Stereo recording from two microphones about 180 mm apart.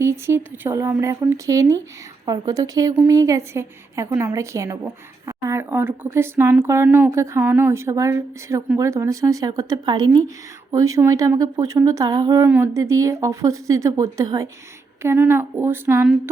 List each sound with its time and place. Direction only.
0.0 s a woman's voice: 15° right (ahead or behind)